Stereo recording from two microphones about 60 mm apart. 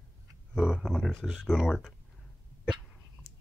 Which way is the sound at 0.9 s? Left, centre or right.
Centre.